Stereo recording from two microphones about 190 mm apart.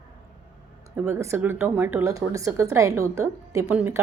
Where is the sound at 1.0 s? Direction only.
15° right (ahead or behind).